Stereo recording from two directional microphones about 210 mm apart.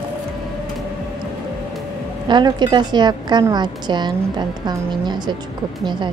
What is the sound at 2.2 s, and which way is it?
A woman's voice, 20° right (ahead or behind).